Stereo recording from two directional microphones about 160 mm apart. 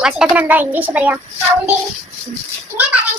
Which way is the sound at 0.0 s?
5° right (ahead or behind).